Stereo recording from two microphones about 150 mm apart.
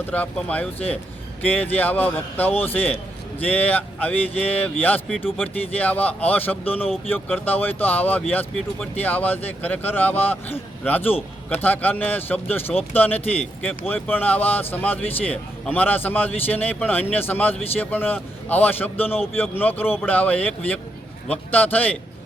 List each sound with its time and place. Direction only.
0.0 s speech: 10° left (ahead or behind)